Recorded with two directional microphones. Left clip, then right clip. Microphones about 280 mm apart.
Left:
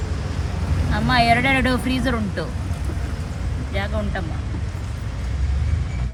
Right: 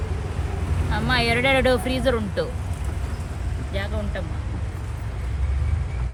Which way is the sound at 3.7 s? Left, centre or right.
Centre.